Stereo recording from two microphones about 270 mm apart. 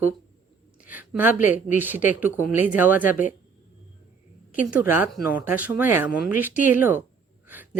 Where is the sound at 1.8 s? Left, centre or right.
Centre.